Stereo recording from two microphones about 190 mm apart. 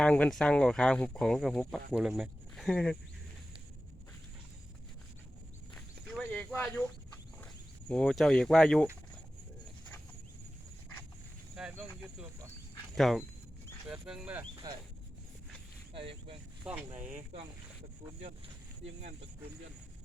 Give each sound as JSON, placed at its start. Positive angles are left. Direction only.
{"t": 0.0, "sound": "speech", "side_deg": 5}
{"t": 5.7, "sound": "a sound", "side_deg": 5}
{"t": 7.4, "sound": "speech", "side_deg": 5}
{"t": 11.5, "sound": "cricket", "side_deg": -5}
{"t": 13.0, "sound": "speech", "side_deg": 0}
{"t": 14.5, "sound": "a sound", "side_deg": -20}
{"t": 16.6, "sound": "speech", "side_deg": -5}